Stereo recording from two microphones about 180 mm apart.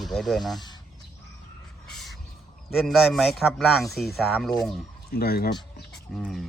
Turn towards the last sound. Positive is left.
turn(degrees=0)  # may be behind; listen again after turning